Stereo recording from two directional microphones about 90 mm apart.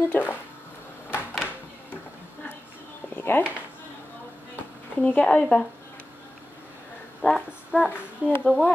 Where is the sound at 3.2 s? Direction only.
25° left (ahead or behind).